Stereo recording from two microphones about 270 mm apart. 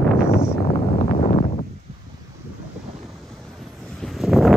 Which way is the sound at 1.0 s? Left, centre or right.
Left.